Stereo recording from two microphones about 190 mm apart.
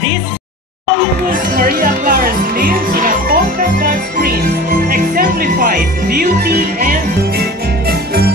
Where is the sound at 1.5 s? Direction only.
50° right (ahead or behind).